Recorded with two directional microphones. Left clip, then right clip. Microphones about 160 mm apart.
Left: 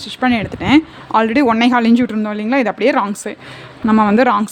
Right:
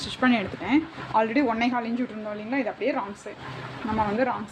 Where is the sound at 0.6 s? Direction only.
60° left (ahead or behind); by 1.9 s 80° left.